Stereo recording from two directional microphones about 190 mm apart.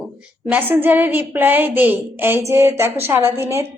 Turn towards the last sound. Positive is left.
turn(degrees=-15)  # may be behind; listen again after turning